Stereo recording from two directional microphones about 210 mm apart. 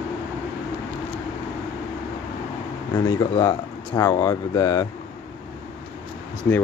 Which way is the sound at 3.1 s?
20° left (ahead or behind).